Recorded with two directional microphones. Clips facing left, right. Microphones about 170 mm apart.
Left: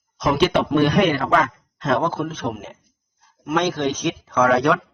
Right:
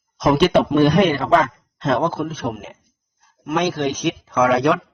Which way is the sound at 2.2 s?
10° right (ahead or behind).